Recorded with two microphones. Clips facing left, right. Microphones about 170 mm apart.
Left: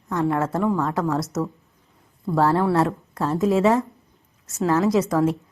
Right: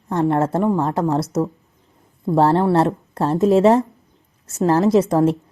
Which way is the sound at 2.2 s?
25° right (ahead or behind).